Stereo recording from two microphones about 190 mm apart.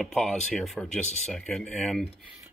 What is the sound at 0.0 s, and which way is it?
Speech, 5° left (ahead or behind).